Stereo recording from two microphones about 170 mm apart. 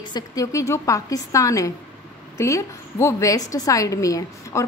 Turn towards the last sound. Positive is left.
turn(degrees=20)  # may be behind; listen again after turning